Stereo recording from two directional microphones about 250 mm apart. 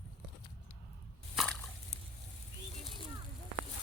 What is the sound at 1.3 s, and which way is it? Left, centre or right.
Slosh, centre.